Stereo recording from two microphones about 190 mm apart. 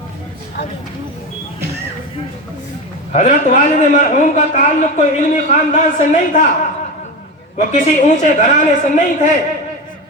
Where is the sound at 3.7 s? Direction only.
40° left (ahead or behind).